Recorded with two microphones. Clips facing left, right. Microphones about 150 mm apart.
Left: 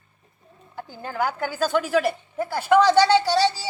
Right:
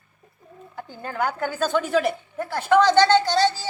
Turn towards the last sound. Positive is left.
turn(degrees=10)  # may be behind; listen again after turning